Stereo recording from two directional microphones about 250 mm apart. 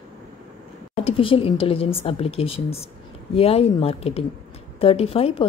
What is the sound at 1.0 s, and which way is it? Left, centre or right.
A woman's voice, left.